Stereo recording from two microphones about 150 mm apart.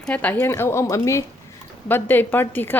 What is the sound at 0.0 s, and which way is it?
Speech, 10° left (ahead or behind).